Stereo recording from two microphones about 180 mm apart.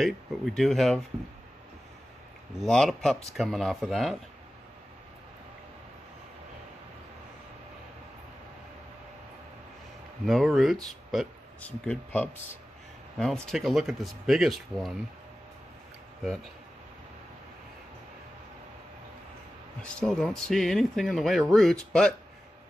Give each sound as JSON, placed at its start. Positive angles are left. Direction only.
{"t": 0.6, "sound": "speech", "side_deg": 0}
{"t": 2.6, "sound": "speech", "side_deg": 0}
{"t": 10.2, "sound": "speech", "side_deg": 0}
{"t": 19.8, "sound": "speech", "side_deg": 5}